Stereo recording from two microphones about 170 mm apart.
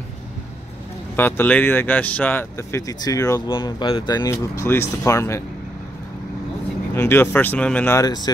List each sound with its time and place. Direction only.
1.1 s speech: 10° left (ahead or behind)
6.9 s speech: 15° left (ahead or behind)
8.0 s speech: 25° left (ahead or behind)